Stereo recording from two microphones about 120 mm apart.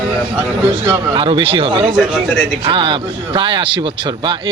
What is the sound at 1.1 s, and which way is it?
A man's voice, 45° right (ahead or behind).